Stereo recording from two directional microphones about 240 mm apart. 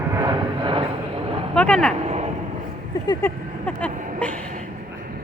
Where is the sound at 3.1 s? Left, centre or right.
Centre.